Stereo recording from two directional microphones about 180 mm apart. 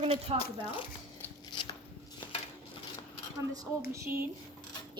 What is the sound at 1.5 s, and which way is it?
Shuffling cards, 25° left (ahead or behind).